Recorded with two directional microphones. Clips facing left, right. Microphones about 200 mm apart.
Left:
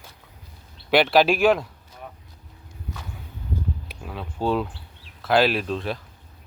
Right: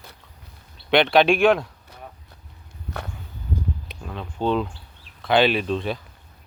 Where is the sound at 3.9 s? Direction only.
5° left (ahead or behind).